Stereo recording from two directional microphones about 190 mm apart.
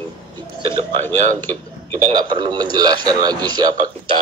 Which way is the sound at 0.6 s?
30° right (ahead or behind).